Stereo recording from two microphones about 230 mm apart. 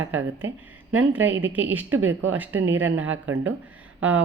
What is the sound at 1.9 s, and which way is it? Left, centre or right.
Speech, right.